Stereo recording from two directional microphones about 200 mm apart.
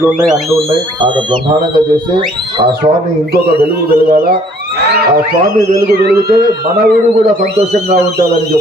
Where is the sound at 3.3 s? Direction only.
50° right (ahead or behind).